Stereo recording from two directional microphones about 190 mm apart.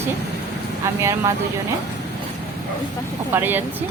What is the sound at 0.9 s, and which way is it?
Speech, 15° right (ahead or behind).